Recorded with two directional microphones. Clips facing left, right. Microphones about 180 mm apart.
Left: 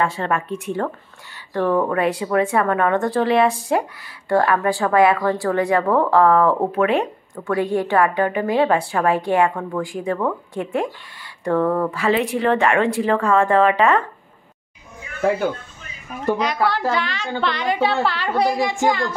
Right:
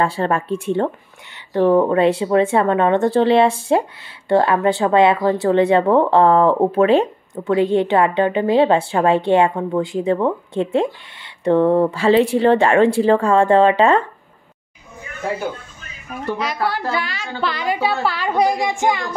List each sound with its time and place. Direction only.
0.0 s a woman's voice: 30° right (ahead or behind)
16.6 s a child's voice: 10° right (ahead or behind)